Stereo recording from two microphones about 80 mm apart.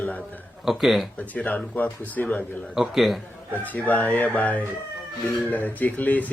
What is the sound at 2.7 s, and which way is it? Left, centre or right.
Speech, centre.